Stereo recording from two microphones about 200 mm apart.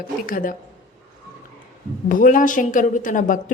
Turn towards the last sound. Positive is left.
turn(degrees=40)  # may be behind; listen again after turning